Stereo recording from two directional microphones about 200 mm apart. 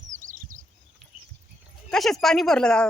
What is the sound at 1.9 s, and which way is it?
Speech, centre (ahead or behind).